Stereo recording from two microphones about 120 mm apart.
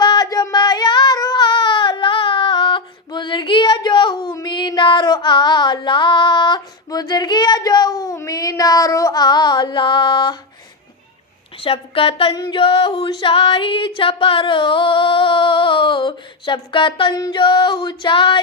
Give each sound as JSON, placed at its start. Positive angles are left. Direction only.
{"t": 0.0, "sound": "a sound", "side_deg": 35}
{"t": 11.6, "sound": "music", "side_deg": 50}
{"t": 12.3, "sound": "singing", "side_deg": 30}
{"t": 12.5, "sound": "music", "side_deg": 45}